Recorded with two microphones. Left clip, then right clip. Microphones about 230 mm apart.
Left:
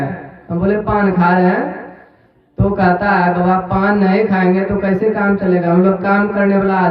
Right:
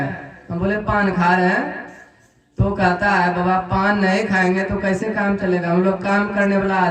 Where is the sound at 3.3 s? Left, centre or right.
Right.